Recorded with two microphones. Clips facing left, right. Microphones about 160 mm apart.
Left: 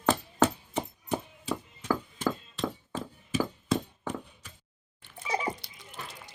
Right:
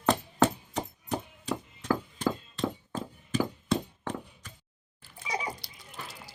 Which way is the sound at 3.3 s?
5° left (ahead or behind).